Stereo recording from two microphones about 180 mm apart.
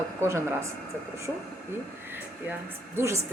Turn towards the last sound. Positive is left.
turn(degrees=-15)  # may be behind; listen again after turning